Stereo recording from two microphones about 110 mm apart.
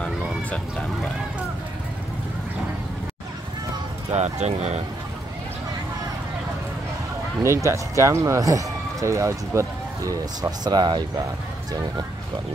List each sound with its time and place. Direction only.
0.0 s a sound: 10° left (ahead or behind)
4.1 s speech: 90° right
7.4 s speech: 25° right (ahead or behind)